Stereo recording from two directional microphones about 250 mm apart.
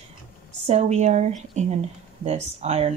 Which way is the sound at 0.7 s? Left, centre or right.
Right.